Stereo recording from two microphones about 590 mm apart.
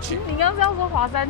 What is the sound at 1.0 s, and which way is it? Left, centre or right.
Speech, left.